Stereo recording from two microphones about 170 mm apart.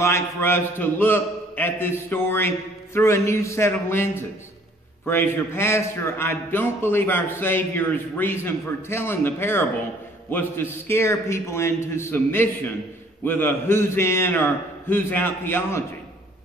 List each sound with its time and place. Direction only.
0.0 s a man's voice: 15° left (ahead or behind)